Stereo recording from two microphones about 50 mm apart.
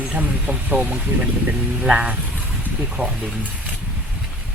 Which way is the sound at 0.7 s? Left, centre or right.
Right.